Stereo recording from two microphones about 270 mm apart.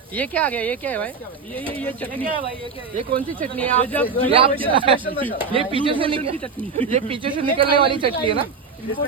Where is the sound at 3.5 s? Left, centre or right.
Centre.